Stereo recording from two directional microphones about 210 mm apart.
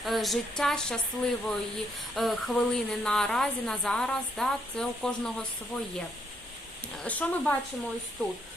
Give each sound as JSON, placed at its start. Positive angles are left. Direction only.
{"t": 0.0, "sound": "a woman's voice", "side_deg": 0}
{"t": 7.0, "sound": "speech", "side_deg": 5}